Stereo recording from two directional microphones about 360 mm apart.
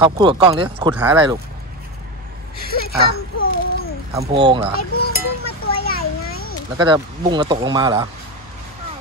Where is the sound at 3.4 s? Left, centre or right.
Left.